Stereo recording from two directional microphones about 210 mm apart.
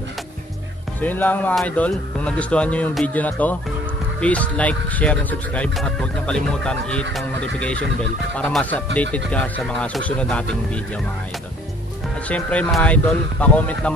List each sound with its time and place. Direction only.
1.0 s speech: 10° left (ahead or behind)
12.3 s speech: 5° left (ahead or behind)